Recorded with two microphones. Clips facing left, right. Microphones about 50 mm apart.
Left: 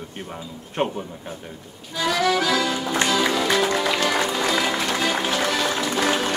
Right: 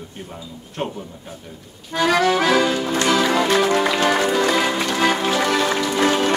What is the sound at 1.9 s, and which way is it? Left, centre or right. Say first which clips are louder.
Accordion: right 4 dB; right.